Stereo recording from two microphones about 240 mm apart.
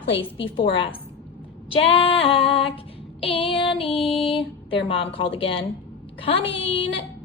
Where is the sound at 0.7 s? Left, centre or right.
Left.